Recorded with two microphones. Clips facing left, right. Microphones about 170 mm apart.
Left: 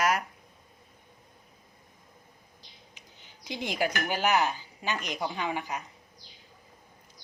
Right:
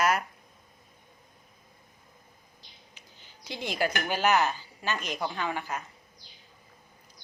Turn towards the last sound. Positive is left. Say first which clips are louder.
# even
turn(degrees=15)  # may be behind; listen again after turning